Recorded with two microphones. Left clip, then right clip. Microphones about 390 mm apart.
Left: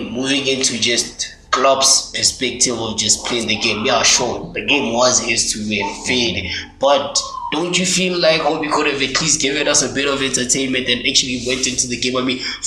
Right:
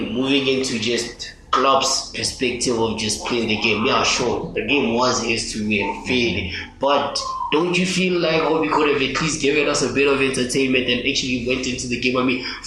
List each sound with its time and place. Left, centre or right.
0.2 s speech: centre
3.5 s speech: left